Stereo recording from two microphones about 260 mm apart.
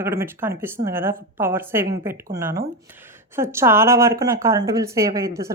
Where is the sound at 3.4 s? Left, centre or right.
Centre.